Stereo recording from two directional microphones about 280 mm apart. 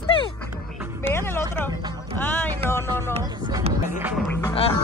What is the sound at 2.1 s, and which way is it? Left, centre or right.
Speech, centre.